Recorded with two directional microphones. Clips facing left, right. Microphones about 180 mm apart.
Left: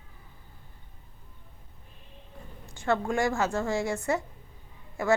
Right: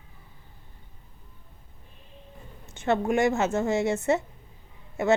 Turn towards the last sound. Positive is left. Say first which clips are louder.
# right 3 dB
turn(degrees=-25)  # may be behind; listen again after turning